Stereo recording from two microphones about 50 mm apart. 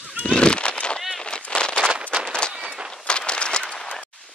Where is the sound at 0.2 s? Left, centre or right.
Left.